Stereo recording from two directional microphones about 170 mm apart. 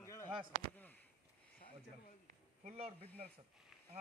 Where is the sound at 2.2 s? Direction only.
40° right (ahead or behind).